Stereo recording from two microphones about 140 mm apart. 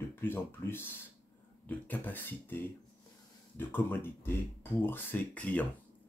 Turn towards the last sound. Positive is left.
turn(degrees=10)  # may be behind; listen again after turning